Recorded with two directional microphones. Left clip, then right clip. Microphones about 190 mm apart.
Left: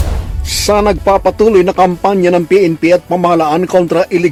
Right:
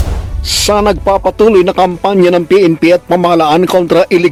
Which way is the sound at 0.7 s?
10° right (ahead or behind).